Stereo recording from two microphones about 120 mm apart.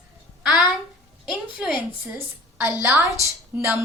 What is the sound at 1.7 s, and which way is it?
A woman's voice, 15° right (ahead or behind).